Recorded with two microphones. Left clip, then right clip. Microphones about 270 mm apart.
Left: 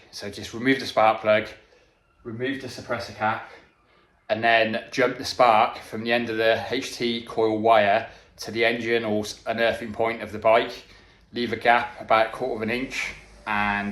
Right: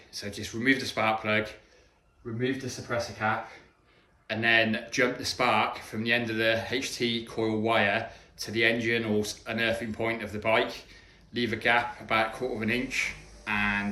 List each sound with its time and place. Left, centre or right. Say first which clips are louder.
0.1 s speech: left 2 dB; centre
3.2 s speech: left 4 dB; centre
4.3 s speech: left 4 dB; centre